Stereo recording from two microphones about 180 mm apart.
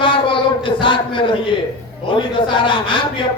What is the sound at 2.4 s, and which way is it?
Speech, 25° left (ahead or behind).